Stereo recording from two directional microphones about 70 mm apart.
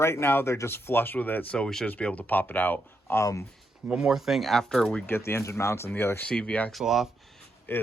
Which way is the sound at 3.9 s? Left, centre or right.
Centre.